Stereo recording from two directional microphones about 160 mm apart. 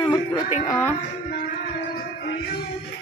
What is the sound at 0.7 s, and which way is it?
Speech, 15° left (ahead or behind).